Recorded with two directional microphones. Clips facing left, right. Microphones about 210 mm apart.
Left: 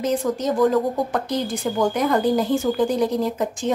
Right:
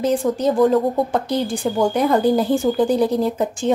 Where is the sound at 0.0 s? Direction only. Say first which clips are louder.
Right 4 dB; 30° right (ahead or behind).